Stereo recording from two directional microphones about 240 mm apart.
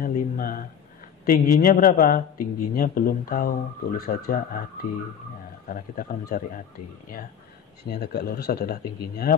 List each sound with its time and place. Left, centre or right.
0.0 s a sound: left
1.2 s a man's voice: left
5.7 s a man's voice: left
7.9 s a man's voice: left